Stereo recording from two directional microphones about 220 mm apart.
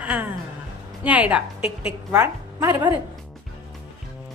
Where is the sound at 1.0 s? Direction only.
5° right (ahead or behind).